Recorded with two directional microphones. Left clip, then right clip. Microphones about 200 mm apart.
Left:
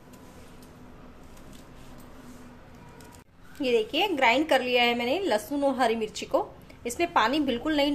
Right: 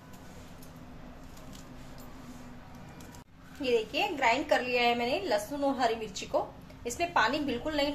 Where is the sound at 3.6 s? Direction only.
40° left (ahead or behind).